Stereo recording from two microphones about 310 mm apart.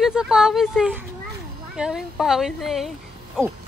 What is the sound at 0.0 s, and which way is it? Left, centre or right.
Speech, centre.